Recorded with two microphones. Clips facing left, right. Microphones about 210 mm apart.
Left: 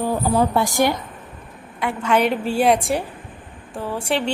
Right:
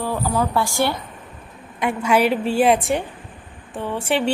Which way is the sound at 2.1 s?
5° right (ahead or behind).